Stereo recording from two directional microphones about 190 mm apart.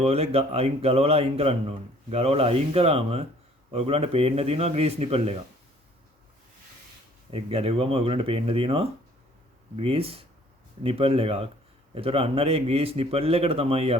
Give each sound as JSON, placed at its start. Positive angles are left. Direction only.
{"t": 0.0, "sound": "speech", "side_deg": -30}
{"t": 7.3, "sound": "speech", "side_deg": -30}